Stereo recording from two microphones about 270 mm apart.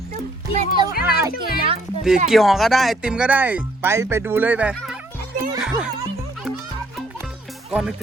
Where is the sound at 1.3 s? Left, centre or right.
Left.